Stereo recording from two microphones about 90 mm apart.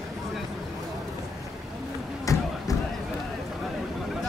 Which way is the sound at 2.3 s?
35° left (ahead or behind).